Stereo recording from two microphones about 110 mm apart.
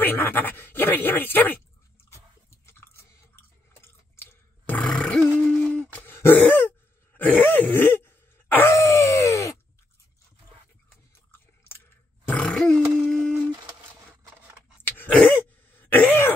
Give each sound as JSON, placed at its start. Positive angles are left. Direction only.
{"t": 0.0, "sound": "speech", "side_deg": 20}
{"t": 2.5, "sound": "chewing", "side_deg": 25}
{"t": 3.8, "sound": "a sound", "side_deg": 20}
{"t": 5.9, "sound": "throat clearing", "side_deg": 20}
{"t": 8.7, "sound": "a sound", "side_deg": 30}
{"t": 12.3, "sound": "grunt", "side_deg": 10}
{"t": 12.9, "sound": "humming", "side_deg": 5}
{"t": 14.9, "sound": "throat clearing", "side_deg": 20}